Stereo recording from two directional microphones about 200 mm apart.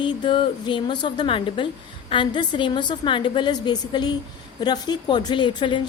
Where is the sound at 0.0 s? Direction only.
25° left (ahead or behind).